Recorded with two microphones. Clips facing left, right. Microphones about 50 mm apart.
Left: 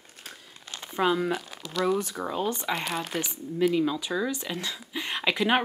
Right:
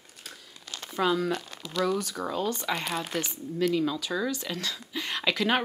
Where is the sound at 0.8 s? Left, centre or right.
Centre.